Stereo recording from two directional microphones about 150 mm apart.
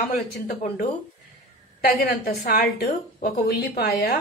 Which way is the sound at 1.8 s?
90° left.